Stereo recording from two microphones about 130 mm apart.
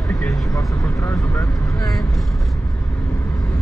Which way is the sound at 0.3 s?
25° left (ahead or behind).